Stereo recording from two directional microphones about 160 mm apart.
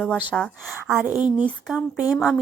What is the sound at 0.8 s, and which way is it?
Speech, 15° right (ahead or behind).